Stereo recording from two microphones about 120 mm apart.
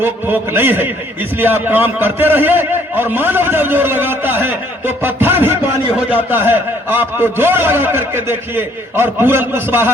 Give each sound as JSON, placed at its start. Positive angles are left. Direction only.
{"t": 0.0, "sound": "a man's voice", "side_deg": -15}